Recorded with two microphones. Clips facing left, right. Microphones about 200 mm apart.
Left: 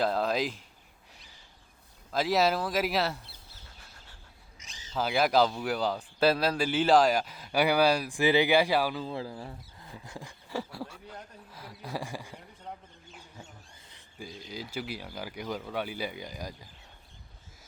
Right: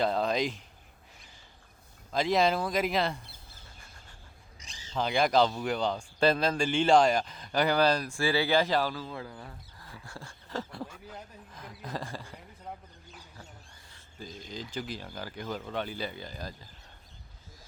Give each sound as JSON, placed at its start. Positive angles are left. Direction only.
{"t": 0.0, "sound": "speech", "side_deg": 0}
{"t": 2.1, "sound": "speech", "side_deg": 5}
{"t": 4.6, "sound": "a sound", "side_deg": -35}
{"t": 4.9, "sound": "speech", "side_deg": 5}
{"t": 9.0, "sound": "speech", "side_deg": 30}
{"t": 13.9, "sound": "speech", "side_deg": 10}